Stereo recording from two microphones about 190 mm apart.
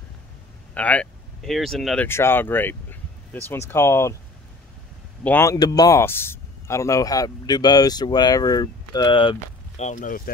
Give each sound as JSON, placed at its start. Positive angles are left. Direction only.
{"t": 0.7, "sound": "speech", "side_deg": 5}
{"t": 2.0, "sound": "speech", "side_deg": 10}
{"t": 5.2, "sound": "speech", "side_deg": 10}
{"t": 9.8, "sound": "speech", "side_deg": 45}